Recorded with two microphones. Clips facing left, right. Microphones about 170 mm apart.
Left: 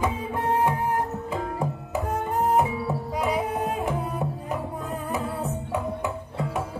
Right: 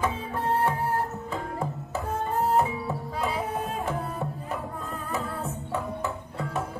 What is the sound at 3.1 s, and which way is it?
Tabla, 15° left (ahead or behind).